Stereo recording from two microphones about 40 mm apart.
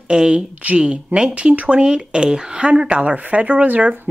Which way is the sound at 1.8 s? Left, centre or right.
Right.